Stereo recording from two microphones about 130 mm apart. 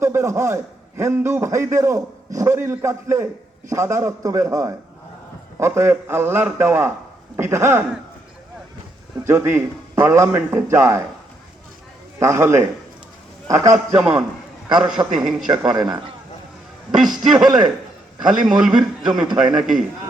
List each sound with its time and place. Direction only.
0.0 s a man's voice: 20° right (ahead or behind)
9.2 s a man's voice: 20° right (ahead or behind)
12.2 s a man's voice: 20° right (ahead or behind)
13.7 s a man's voice: 5° right (ahead or behind)
15.7 s a man's voice: 35° right (ahead or behind)
17.4 s a man's voice: 5° right (ahead or behind)
19.2 s a man's voice: 35° right (ahead or behind)
19.5 s a man's voice: centre (ahead or behind)